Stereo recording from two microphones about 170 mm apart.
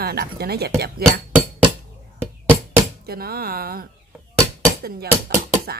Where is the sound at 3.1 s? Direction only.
65° right (ahead or behind).